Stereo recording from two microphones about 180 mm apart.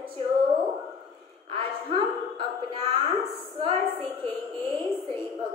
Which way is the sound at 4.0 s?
5° left (ahead or behind).